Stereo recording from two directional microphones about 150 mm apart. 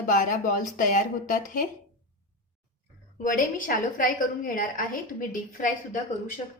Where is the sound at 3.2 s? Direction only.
65° left (ahead or behind).